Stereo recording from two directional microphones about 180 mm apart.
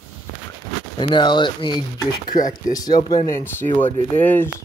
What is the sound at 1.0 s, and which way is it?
Speech, 25° left (ahead or behind).